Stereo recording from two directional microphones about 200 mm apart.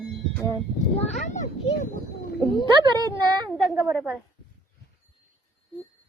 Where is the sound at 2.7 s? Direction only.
20° right (ahead or behind).